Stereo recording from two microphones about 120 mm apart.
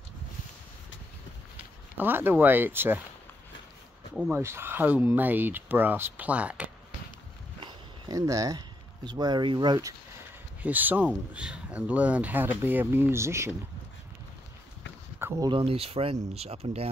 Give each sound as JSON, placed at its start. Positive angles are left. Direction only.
{"t": 2.0, "sound": "speech", "side_deg": -15}
{"t": 4.3, "sound": "speech", "side_deg": -20}
{"t": 8.1, "sound": "speech", "side_deg": -30}
{"t": 10.6, "sound": "speech", "side_deg": -15}
{"t": 15.2, "sound": "a sound", "side_deg": -20}
{"t": 15.6, "sound": "speech", "side_deg": -55}